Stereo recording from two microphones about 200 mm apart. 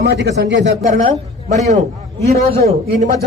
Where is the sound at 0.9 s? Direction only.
35° right (ahead or behind).